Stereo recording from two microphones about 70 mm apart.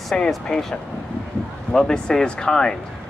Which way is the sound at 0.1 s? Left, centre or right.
Centre.